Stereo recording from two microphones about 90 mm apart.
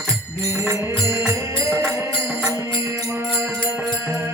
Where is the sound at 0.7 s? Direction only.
30° right (ahead or behind).